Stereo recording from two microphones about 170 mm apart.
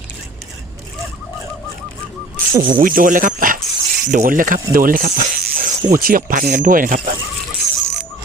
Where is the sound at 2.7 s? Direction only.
55° right (ahead or behind).